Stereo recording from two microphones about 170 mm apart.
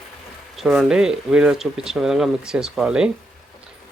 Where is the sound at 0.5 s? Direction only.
Centre (ahead or behind).